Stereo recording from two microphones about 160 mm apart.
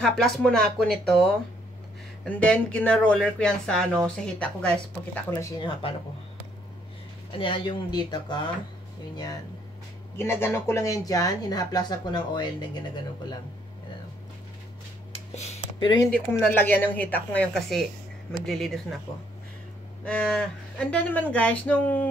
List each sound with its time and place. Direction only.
0.0 s speech: centre (ahead or behind)
2.2 s cattle: 5° left (ahead or behind)
5.4 s speech: 25° left (ahead or behind)
7.3 s speech: 30° left (ahead or behind)
10.1 s speech: 15° left (ahead or behind)
15.1 s a sound: 40° left (ahead or behind)
16.1 s cattle: 10° left (ahead or behind)
18.4 s speech: centre (ahead or behind)
20.1 s cattle: 5° left (ahead or behind)